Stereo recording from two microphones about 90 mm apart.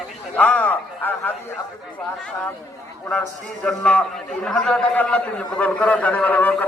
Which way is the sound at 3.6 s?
15° left (ahead or behind).